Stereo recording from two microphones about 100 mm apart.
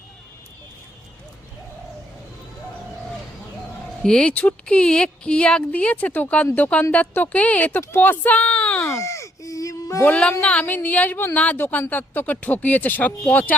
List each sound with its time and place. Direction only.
4.0 s speech: 10° left (ahead or behind)
8.9 s a sound: 30° left (ahead or behind)
10.0 s speech: 10° left (ahead or behind)